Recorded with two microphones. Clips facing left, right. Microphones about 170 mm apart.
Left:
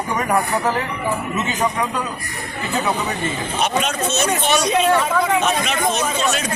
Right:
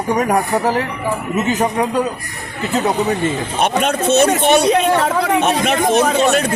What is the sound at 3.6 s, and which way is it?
Speech, 55° right (ahead or behind).